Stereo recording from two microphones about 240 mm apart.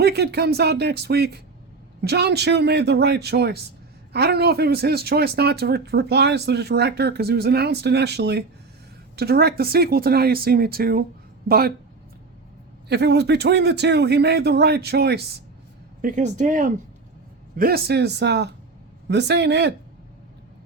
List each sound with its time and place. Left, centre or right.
0.0 s a man's voice: right
12.9 s a man's voice: right